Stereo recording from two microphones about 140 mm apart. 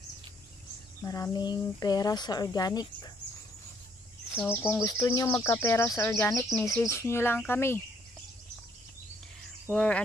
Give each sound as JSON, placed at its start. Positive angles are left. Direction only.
{"t": 1.0, "sound": "speech", "side_deg": 25}
{"t": 4.3, "sound": "speech", "side_deg": 15}
{"t": 9.7, "sound": "speech", "side_deg": 10}